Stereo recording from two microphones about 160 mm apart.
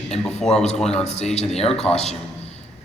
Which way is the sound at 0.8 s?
5° left (ahead or behind).